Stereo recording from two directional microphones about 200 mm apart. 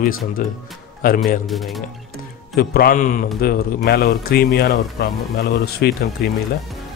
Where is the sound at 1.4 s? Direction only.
Centre (ahead or behind).